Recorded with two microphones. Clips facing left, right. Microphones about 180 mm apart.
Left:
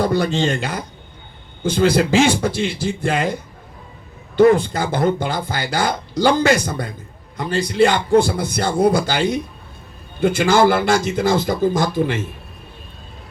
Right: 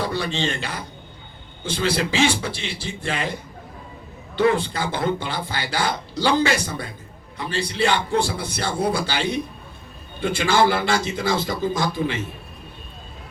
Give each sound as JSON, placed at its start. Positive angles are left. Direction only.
{"t": 0.0, "sound": "speech", "side_deg": 45}
{"t": 4.4, "sound": "speech", "side_deg": 45}